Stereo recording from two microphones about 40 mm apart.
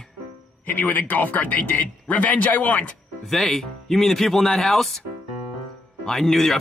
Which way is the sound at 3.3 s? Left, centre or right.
Centre.